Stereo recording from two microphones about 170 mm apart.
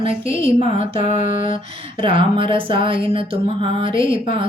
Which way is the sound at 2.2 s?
30° right (ahead or behind).